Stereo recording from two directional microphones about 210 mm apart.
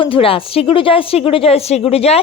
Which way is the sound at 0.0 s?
25° left (ahead or behind).